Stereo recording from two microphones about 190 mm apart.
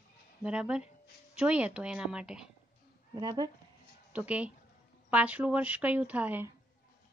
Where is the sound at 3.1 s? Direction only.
20° right (ahead or behind).